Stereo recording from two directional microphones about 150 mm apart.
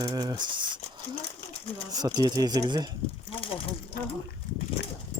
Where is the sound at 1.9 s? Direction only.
25° right (ahead or behind).